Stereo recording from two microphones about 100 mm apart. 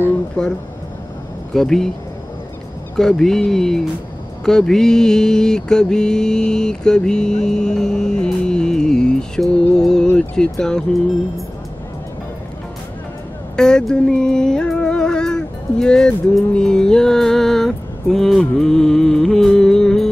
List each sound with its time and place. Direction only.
0.4 s mantra: 10° left (ahead or behind)
1.5 s speech: 5° left (ahead or behind)
3.0 s speech: 5° left (ahead or behind)
4.5 s mantra: 5° left (ahead or behind)
13.6 s music: 5° left (ahead or behind)